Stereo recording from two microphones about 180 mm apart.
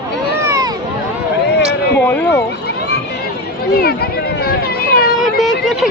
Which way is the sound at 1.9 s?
10° left (ahead or behind).